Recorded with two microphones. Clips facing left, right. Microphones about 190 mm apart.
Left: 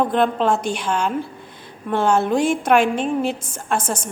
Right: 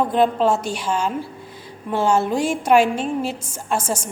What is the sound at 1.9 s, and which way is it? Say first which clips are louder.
A woman's voice: left 1 dB; 55° left (ahead or behind).